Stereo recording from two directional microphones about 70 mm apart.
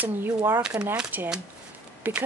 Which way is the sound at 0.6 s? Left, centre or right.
Centre.